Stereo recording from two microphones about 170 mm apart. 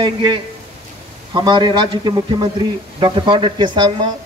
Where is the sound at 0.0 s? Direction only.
25° right (ahead or behind).